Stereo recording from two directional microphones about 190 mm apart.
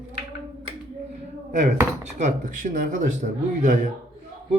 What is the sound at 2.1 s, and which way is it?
A man's voice, 40° right (ahead or behind).